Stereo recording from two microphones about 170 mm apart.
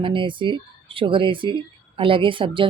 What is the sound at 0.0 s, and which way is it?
A woman's voice, 30° right (ahead or behind).